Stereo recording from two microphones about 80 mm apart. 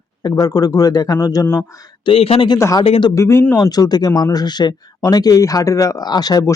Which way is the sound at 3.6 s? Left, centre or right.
Left.